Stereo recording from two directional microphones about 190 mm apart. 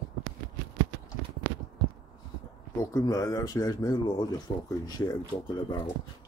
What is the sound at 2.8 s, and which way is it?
Speech, 20° left (ahead or behind).